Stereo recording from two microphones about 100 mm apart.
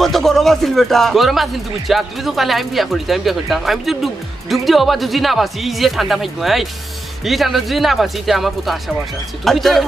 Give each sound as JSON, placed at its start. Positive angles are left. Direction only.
{"t": 0.0, "sound": "speech", "side_deg": 0}